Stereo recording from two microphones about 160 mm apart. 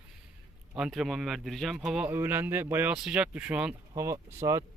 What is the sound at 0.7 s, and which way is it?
Speech, 5° right (ahead or behind).